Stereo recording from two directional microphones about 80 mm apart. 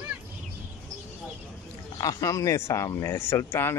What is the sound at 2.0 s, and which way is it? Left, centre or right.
Speech, left.